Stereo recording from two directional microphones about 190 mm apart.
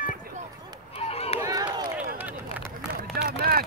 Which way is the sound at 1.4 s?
20° right (ahead or behind).